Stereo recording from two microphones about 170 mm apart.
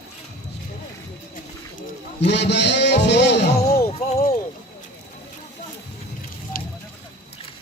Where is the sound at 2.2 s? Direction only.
90° left.